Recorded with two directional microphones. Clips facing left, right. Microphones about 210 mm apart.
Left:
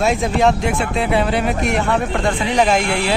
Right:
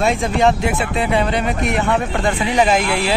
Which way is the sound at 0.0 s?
Centre (ahead or behind).